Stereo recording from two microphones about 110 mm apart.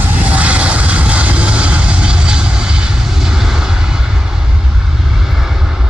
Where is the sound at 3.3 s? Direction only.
5° right (ahead or behind).